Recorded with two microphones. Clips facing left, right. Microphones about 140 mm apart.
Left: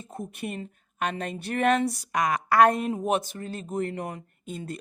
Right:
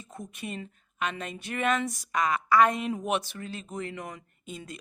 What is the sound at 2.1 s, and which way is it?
A woman's voice, 60° left (ahead or behind).